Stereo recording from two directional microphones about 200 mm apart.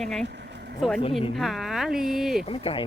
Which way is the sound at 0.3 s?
60° right (ahead or behind).